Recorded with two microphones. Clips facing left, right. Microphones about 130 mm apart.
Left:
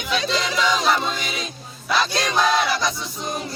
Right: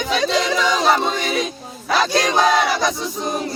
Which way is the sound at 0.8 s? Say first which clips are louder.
Right 4 dB; 55° right (ahead or behind).